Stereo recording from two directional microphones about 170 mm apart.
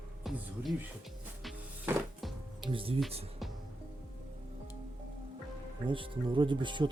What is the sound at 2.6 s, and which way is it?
Speech, 30° right (ahead or behind).